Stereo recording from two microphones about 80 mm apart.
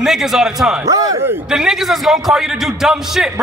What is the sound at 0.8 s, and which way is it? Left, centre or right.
Speech, right.